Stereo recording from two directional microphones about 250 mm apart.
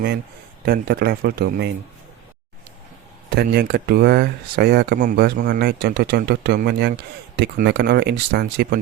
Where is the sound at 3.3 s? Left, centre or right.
Right.